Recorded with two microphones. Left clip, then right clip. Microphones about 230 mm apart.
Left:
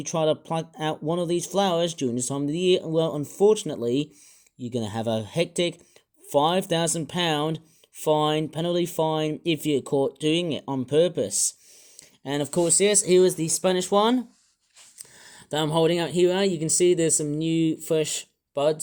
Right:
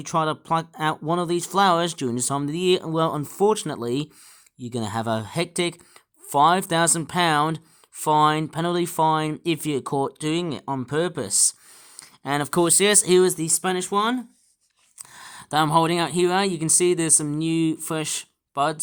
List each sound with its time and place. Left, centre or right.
0.0 s speech: right
10.2 s speech: right
10.7 s speech: right
11.9 s a sound: right
12.6 s speech: right; by 14.3 s centre
14.9 s speech: right